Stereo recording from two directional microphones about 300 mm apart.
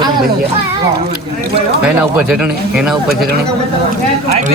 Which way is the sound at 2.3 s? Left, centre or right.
Centre.